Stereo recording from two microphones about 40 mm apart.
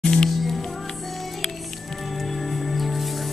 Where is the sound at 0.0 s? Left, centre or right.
Centre.